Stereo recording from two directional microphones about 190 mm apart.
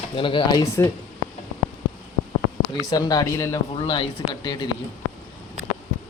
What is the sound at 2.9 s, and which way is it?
Speech, 20° left (ahead or behind).